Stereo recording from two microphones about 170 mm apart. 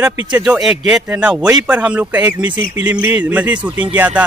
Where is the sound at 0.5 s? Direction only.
5° right (ahead or behind).